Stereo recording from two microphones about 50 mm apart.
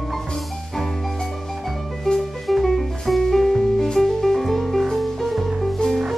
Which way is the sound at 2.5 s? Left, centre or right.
Centre.